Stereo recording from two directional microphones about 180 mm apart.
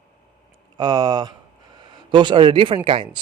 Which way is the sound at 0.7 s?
25° right (ahead or behind).